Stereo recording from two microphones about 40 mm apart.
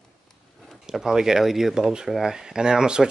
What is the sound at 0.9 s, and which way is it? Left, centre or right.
Speech, centre.